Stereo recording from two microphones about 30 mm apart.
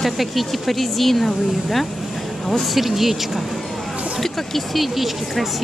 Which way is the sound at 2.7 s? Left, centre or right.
Centre.